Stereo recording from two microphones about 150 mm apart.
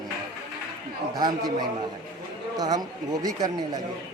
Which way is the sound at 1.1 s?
25° right (ahead or behind).